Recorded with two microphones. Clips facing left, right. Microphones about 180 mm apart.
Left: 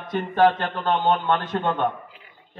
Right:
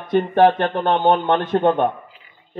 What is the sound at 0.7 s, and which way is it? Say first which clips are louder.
A man's voice: right 5 dB; 55° right (ahead or behind).